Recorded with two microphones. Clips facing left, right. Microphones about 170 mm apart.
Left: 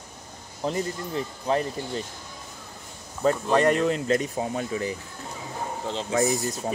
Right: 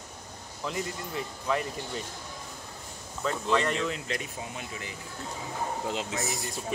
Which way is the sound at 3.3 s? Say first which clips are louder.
Left 7 dB; 50° left (ahead or behind).